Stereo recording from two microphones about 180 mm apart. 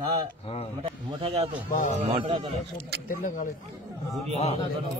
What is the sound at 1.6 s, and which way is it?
Speech, 45° left (ahead or behind).